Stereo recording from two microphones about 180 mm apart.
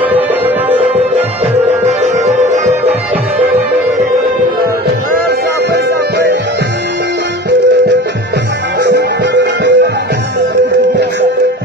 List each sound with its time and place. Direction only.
1.5 s music: 40° right (ahead or behind)
8.8 s music: 75° right (ahead or behind)